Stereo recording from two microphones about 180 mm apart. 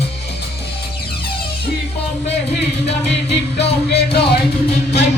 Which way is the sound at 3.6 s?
65° left (ahead or behind).